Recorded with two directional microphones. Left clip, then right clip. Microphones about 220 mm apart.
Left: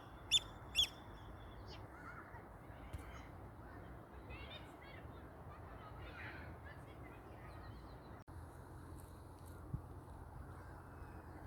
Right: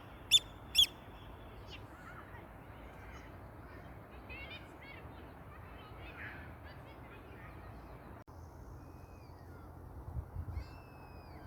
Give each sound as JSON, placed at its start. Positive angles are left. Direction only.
{"t": 0.3, "sound": "fowl", "side_deg": -50}